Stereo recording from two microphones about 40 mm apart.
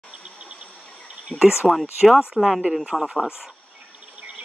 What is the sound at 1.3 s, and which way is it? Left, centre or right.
Speech, centre.